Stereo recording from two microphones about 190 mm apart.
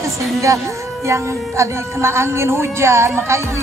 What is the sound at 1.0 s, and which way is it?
Speech, 15° right (ahead or behind).